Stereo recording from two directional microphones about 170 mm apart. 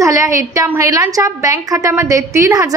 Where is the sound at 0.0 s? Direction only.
20° right (ahead or behind).